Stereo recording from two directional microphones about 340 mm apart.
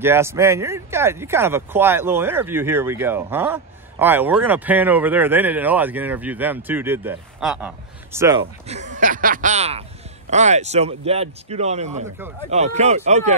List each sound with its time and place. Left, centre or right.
0.0 s speech: centre